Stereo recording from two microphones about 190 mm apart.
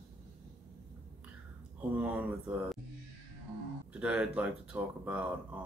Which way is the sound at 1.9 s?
10° right (ahead or behind).